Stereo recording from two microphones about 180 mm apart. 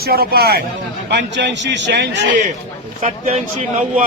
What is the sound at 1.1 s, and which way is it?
A man's voice, 80° right.